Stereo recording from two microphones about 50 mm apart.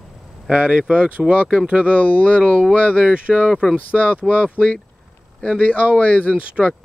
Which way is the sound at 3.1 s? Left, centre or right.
Right.